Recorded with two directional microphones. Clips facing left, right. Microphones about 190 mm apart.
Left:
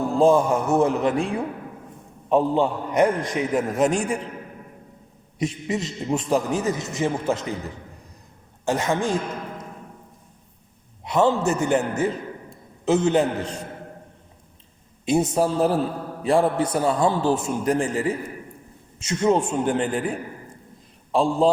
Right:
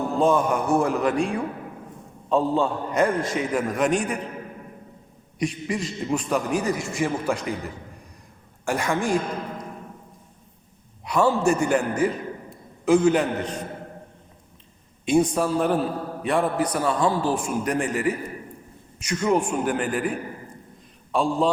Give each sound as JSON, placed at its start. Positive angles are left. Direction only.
{"t": 0.2, "sound": "a man's voice", "side_deg": 25}
{"t": 2.3, "sound": "a man's voice", "side_deg": 20}
{"t": 5.4, "sound": "a man's voice", "side_deg": 25}
{"t": 8.6, "sound": "a man's voice", "side_deg": 20}
{"t": 11.0, "sound": "a man's voice", "side_deg": 20}
{"t": 15.0, "sound": "a man's voice", "side_deg": 25}